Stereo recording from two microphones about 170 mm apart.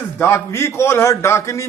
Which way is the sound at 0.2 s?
15° left (ahead or behind).